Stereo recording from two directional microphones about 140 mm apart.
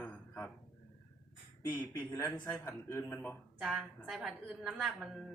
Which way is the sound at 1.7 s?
15° left (ahead or behind).